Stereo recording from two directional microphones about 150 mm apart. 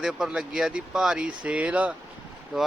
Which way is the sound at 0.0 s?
5° right (ahead or behind).